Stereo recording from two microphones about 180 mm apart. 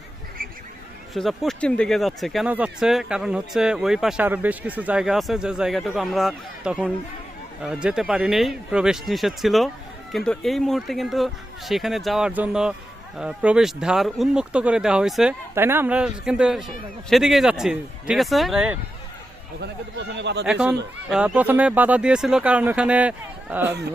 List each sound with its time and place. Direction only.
1.1 s speech: centre (ahead or behind)
19.5 s speech: 70° right (ahead or behind)
20.4 s speech: 5° right (ahead or behind)